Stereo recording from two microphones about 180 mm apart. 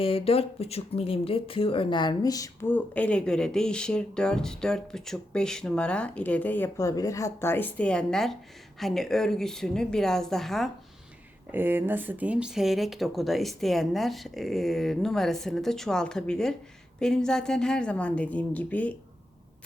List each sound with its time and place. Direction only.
0.0 s speech: 30° left (ahead or behind); by 10.7 s centre (ahead or behind)
11.5 s speech: 10° right (ahead or behind); by 18.9 s 10° left (ahead or behind)